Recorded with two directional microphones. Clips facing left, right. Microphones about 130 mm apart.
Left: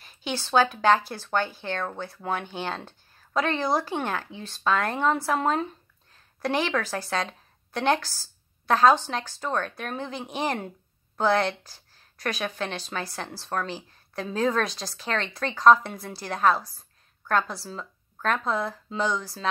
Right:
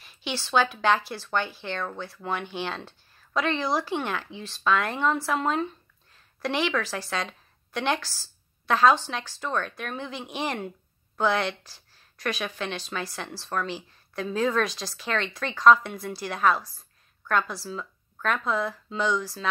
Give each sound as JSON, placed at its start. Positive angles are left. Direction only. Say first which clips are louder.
{"t": 0.0, "sound": "a woman's voice", "louder": "left 1 dB", "side_deg": 45}